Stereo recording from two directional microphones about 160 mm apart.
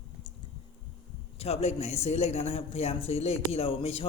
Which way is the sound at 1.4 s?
40° left (ahead or behind).